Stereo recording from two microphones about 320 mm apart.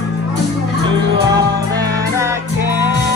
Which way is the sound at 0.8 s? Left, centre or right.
Centre.